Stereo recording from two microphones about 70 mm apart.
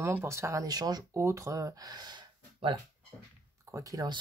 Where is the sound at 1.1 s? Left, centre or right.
Right.